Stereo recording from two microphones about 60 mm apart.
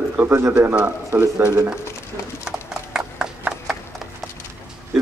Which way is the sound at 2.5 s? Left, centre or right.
Centre.